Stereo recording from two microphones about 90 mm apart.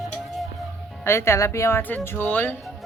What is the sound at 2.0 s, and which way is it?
Speech, 20° left (ahead or behind).